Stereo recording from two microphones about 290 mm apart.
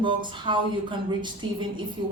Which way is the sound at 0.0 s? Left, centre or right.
Centre.